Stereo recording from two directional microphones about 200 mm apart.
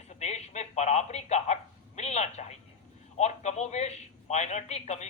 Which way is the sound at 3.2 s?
35° left (ahead or behind).